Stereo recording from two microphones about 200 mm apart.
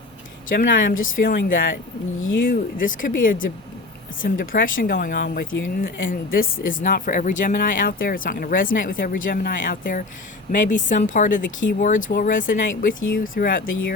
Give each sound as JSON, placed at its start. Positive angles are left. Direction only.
{"t": 0.5, "sound": "speech", "side_deg": 40}
{"t": 5.5, "sound": "speech", "side_deg": 70}
{"t": 5.8, "sound": "speech", "side_deg": 45}
{"t": 12.9, "sound": "speech", "side_deg": 75}
{"t": 13.1, "sound": "speech", "side_deg": 45}